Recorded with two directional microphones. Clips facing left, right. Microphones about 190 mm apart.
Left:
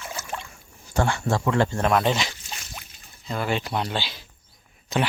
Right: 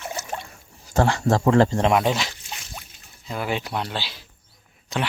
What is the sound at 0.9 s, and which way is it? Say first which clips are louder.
Speech: right 4 dB; 35° right (ahead or behind).